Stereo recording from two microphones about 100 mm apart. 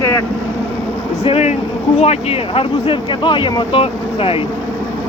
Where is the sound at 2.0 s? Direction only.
75° left (ahead or behind).